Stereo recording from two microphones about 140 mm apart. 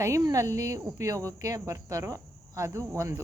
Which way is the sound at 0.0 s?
25° right (ahead or behind).